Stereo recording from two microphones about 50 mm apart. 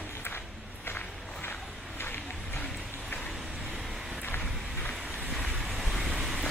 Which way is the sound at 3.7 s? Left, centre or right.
Centre.